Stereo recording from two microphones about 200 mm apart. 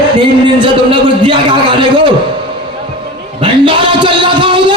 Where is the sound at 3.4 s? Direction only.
25° right (ahead or behind).